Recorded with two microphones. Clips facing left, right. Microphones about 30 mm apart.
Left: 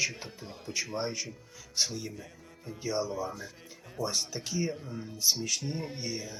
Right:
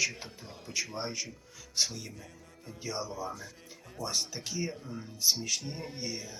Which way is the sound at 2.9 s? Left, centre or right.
Centre.